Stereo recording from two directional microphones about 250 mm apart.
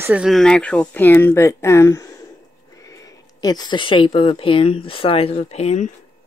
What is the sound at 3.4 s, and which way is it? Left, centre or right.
Speech, centre.